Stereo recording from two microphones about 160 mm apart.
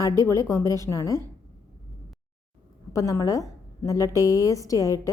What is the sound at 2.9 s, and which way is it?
A woman's voice, 20° left (ahead or behind).